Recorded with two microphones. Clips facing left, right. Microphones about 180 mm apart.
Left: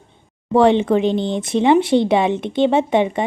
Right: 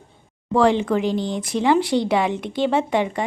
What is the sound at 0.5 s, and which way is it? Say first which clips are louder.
Speech: left 4 dB; 20° left (ahead or behind).